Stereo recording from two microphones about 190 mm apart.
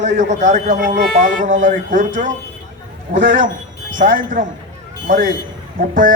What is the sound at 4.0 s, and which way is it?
Speech, 45° right (ahead or behind).